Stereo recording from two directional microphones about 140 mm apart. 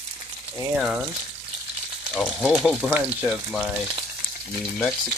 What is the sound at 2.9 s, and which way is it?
Speech, 15° right (ahead or behind).